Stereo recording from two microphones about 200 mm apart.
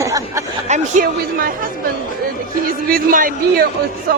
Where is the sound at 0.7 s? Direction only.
35° right (ahead or behind).